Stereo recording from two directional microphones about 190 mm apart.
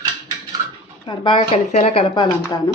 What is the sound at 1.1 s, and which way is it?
Speech, 25° left (ahead or behind).